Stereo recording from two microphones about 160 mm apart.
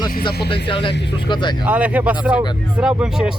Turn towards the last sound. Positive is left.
turn(degrees=-5)  # may be behind; listen again after turning